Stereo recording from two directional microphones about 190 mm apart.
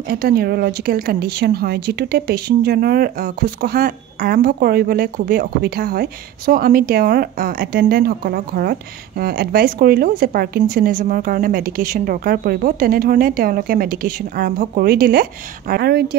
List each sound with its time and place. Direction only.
0.1 s a woman's voice: 50° right (ahead or behind)